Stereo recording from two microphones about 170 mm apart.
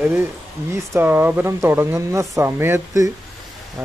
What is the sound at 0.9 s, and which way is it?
Speech, 10° right (ahead or behind).